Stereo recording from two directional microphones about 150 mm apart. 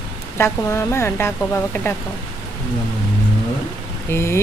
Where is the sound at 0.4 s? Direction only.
20° left (ahead or behind).